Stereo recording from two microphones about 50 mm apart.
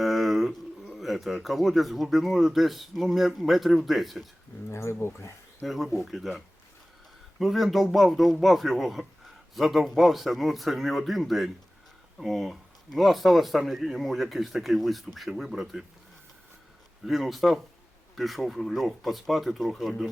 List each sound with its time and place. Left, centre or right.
0.0 s speech: centre
4.7 s speech: left
5.6 s a man's voice: centre
17.1 s a man's voice: centre